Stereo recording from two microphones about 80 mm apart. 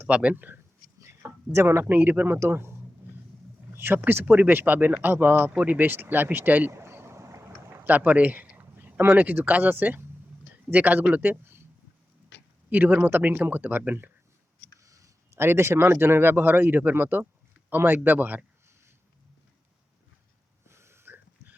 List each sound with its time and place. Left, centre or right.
0.0 s speech: centre
0.9 s speech: right
3.8 s speech: right
6.7 s a sound: right
10.7 s speech: right
12.7 s speech: right
14.8 s a sound: right
15.4 s speech: right
20.7 s a sound: right